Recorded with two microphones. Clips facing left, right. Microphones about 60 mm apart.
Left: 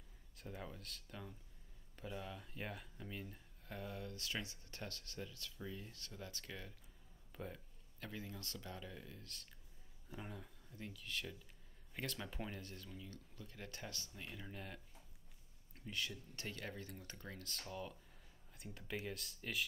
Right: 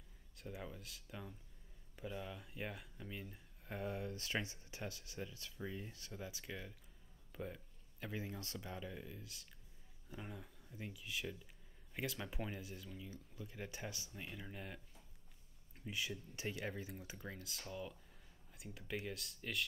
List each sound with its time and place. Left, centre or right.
0.4 s speech: centre
3.6 s speech: right
4.6 s speech: centre
7.3 s a sound: centre
8.1 s speech: right; by 19.6 s centre